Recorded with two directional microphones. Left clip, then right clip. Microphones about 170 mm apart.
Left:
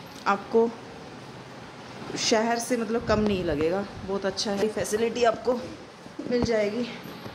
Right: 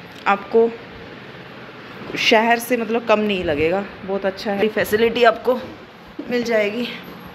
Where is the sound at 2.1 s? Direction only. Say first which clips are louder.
Right 9 dB; 5° left (ahead or behind).